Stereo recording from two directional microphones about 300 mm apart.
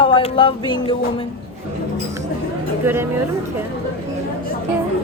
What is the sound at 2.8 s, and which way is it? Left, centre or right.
Speech, centre.